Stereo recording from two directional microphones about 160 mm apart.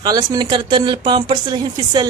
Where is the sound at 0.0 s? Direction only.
25° right (ahead or behind).